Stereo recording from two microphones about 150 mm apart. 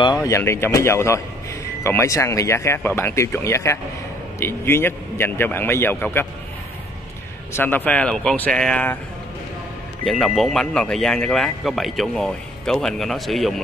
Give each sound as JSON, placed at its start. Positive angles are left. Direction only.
{"t": 0.0, "sound": "speech", "side_deg": 25}
{"t": 7.5, "sound": "speech", "side_deg": 15}
{"t": 10.0, "sound": "speech", "side_deg": 0}